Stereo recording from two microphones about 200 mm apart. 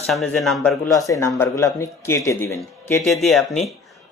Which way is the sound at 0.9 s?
15° left (ahead or behind).